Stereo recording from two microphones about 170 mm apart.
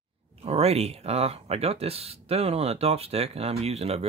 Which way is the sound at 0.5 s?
40° right (ahead or behind).